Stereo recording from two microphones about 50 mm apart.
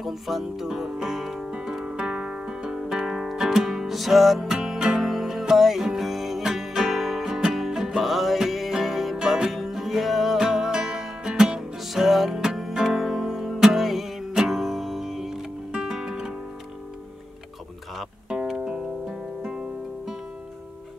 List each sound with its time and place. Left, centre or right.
0.0 s music: centre
18.3 s music: centre